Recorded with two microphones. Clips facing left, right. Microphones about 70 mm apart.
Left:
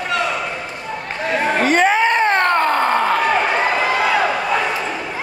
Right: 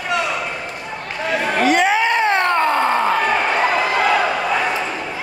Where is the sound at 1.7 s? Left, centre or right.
Left.